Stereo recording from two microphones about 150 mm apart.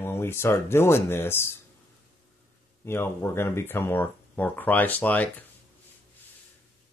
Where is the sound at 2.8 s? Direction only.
15° left (ahead or behind).